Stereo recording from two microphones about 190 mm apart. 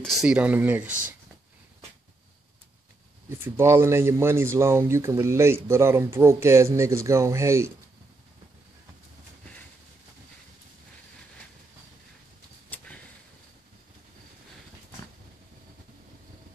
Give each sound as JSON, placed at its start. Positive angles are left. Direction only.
{"t": 0.0, "sound": "speech", "side_deg": 0}
{"t": 0.8, "sound": "speech", "side_deg": -45}
{"t": 3.3, "sound": "speech", "side_deg": -15}
{"t": 12.6, "sound": "a sound", "side_deg": 5}